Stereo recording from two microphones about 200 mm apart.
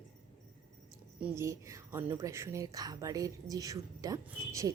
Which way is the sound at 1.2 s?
15° right (ahead or behind).